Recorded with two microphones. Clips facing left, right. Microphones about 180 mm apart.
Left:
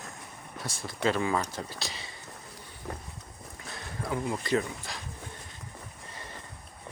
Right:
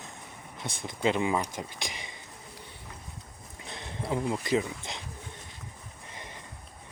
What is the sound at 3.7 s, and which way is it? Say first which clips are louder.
Speech: right 2 dB; 20° right (ahead or behind).